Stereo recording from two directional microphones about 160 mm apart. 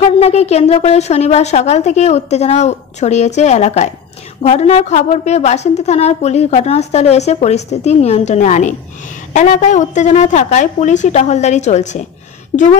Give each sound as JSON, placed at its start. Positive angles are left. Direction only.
{"t": 0.0, "sound": "a woman's voice", "side_deg": 40}